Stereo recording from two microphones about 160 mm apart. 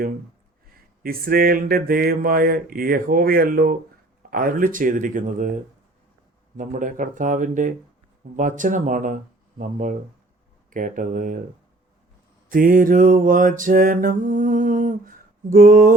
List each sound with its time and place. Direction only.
1.0 s mantra: 65° right (ahead or behind)
6.6 s mantra: 55° right (ahead or behind)
8.4 s speech: 55° right (ahead or behind)
10.7 s mantra: 55° right (ahead or behind)
12.5 s mantra: 60° right (ahead or behind)